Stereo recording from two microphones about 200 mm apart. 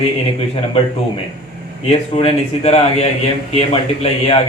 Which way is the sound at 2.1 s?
30° left (ahead or behind).